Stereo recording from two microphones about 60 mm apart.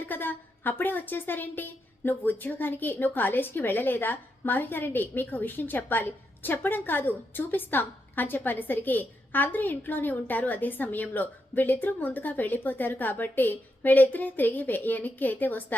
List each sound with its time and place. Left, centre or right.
0.0 s a woman's voice: left